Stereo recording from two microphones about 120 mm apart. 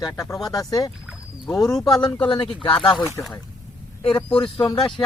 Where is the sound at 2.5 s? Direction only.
5° left (ahead or behind).